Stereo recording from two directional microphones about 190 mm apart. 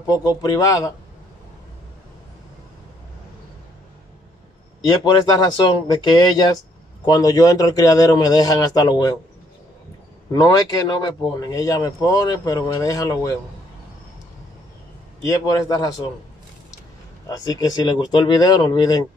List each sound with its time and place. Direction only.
0.0 s speech: 20° left (ahead or behind)
4.8 s speech: 25° left (ahead or behind)
10.3 s speech: 20° left (ahead or behind)
15.2 s speech: 20° left (ahead or behind)
17.3 s speech: 20° left (ahead or behind)